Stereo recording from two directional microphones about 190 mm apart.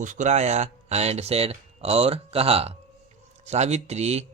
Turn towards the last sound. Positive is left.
turn(degrees=-35)  # may be behind; listen again after turning